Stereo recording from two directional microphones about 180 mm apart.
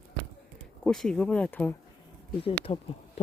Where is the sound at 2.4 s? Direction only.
30° left (ahead or behind).